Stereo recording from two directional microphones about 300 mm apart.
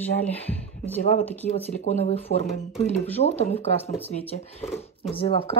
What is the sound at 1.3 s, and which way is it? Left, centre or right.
Speech, centre.